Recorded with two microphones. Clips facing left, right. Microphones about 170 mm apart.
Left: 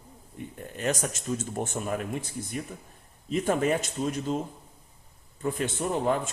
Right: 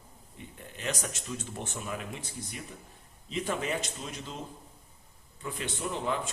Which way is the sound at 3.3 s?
45° left (ahead or behind).